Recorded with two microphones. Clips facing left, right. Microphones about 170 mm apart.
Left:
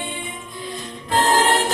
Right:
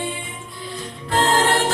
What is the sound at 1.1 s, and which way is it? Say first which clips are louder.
Music: left 1 dB; 20° left (ahead or behind).